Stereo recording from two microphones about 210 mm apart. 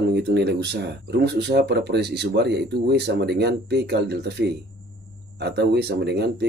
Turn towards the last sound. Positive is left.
turn(degrees=-50)  # may be behind; listen again after turning